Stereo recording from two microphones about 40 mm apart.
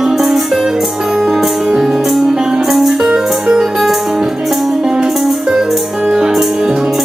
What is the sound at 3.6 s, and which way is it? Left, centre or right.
Music, centre.